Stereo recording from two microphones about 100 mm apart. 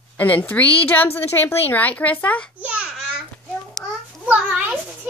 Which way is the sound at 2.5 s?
10° right (ahead or behind).